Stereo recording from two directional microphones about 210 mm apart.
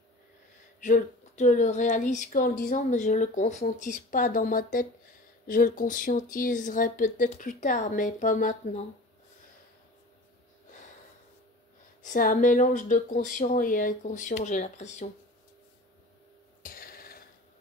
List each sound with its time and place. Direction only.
0.7 s speech: 35° left (ahead or behind)
12.0 s speech: 40° left (ahead or behind)
16.6 s a sound: 45° left (ahead or behind)